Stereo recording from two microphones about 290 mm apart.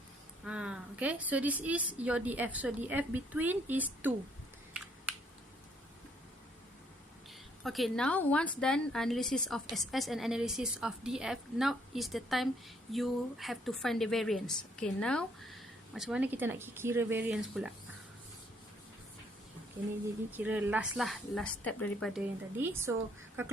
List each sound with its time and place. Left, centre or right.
0.4 s a woman's voice: centre
7.6 s a woman's voice: centre
20.3 s a woman's voice: centre